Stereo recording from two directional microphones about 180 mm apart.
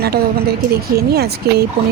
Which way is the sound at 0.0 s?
60° right (ahead or behind).